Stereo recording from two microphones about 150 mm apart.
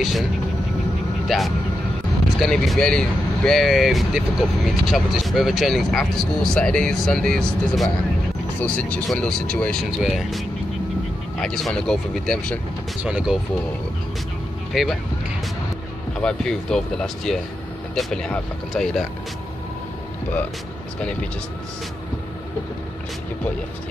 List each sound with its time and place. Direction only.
1.3 s speech: centre (ahead or behind)
11.4 s speech: 5° left (ahead or behind)
13.0 s speech: 5° right (ahead or behind)
14.7 s speech: centre (ahead or behind)
16.2 s speech: 5° left (ahead or behind)